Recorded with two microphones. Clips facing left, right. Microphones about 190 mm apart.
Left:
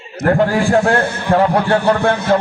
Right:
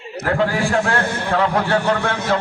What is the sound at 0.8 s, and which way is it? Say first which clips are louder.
A man's voice: left 5 dB; 40° left (ahead or behind).